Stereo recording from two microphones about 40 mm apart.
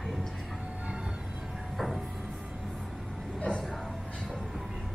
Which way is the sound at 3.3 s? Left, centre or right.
Left.